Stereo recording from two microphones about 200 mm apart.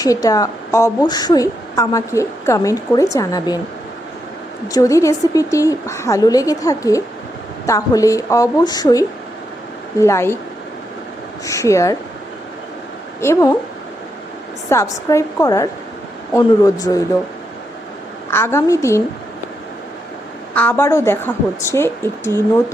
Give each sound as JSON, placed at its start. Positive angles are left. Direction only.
{"t": 0.0, "sound": "a woman's voice", "side_deg": 15}
{"t": 4.7, "sound": "a woman's voice", "side_deg": 15}
{"t": 11.4, "sound": "a woman's voice", "side_deg": 15}
{"t": 13.2, "sound": "a woman's voice", "side_deg": 15}
{"t": 14.7, "sound": "a woman's voice", "side_deg": 15}
{"t": 18.3, "sound": "a woman's voice", "side_deg": 10}
{"t": 20.5, "sound": "a woman's voice", "side_deg": 10}